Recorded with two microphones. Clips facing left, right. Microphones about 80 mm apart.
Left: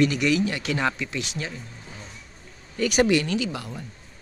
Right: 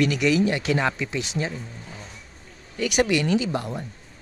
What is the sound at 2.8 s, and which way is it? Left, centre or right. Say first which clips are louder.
Speech: left 1 dB; centre.